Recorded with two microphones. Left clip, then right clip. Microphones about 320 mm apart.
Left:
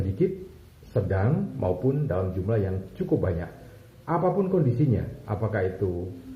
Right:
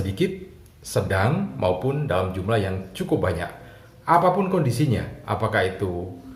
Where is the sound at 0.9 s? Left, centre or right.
Right.